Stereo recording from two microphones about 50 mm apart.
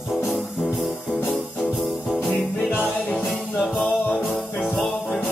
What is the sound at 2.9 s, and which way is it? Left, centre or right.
Music, left.